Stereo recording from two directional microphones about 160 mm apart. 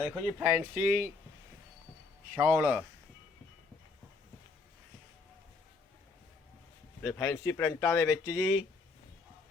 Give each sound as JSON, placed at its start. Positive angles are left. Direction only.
{"t": 0.1, "sound": "speech", "side_deg": -5}
{"t": 2.3, "sound": "speech", "side_deg": -10}
{"t": 7.0, "sound": "speech", "side_deg": 15}